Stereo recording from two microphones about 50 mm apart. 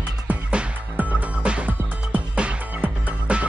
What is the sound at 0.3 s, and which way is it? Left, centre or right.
Music, right.